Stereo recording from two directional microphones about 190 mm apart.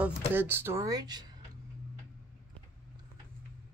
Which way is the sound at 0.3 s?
10° right (ahead or behind).